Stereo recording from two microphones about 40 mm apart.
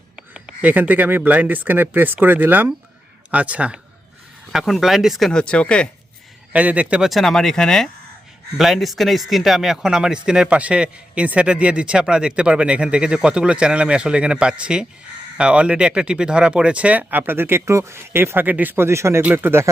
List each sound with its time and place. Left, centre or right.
0.6 s speech: right
3.3 s a man's voice: right
4.6 s speech: centre
5.3 s speech: left
6.5 s a man's voice: right
7.1 s speech: centre
8.5 s a man's voice: centre; by 17.1 s right
17.1 s speech: right
17.3 s speech: right
18.4 s speech: right